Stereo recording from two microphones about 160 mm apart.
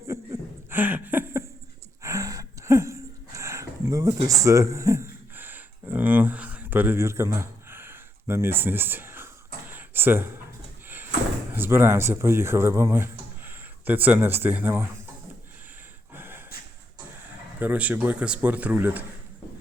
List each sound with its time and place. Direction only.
0.1 s a sound: 15° right (ahead or behind)
10.8 s door: 10° right (ahead or behind)
11.5 s speech: 15° right (ahead or behind)
16.1 s snort: 15° right (ahead or behind)
17.6 s speech: 10° right (ahead or behind)